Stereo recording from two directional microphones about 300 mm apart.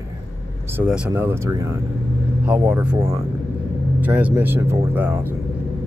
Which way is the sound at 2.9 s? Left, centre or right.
Centre.